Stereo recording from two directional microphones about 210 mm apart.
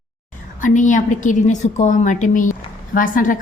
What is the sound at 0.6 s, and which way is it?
A woman's voice, 35° left (ahead or behind).